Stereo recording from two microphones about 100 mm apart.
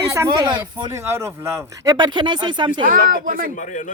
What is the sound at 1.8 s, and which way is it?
Speech, 40° right (ahead or behind).